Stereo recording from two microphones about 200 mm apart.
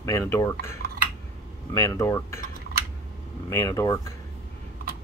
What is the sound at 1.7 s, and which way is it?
Speech, 15° left (ahead or behind).